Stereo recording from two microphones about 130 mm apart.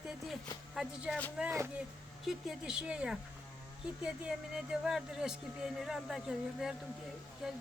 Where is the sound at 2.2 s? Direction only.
5° right (ahead or behind).